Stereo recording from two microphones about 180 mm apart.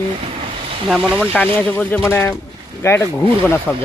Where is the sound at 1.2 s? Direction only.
10° left (ahead or behind).